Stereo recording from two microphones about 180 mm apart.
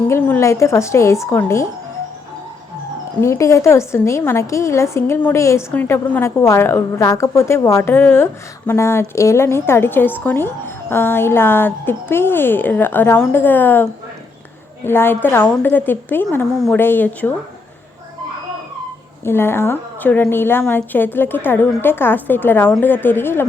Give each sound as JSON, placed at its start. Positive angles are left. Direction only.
{"t": 0.1, "sound": "a woman's voice", "side_deg": 15}
{"t": 3.2, "sound": "a woman's voice", "side_deg": 15}
{"t": 14.8, "sound": "a woman's voice", "side_deg": 10}
{"t": 19.2, "sound": "a woman's voice", "side_deg": 15}